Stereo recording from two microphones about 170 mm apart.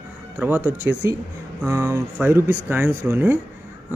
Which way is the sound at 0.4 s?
10° right (ahead or behind).